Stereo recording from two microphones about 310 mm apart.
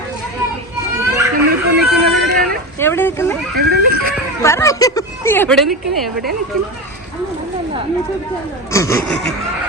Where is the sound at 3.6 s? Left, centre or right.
Right.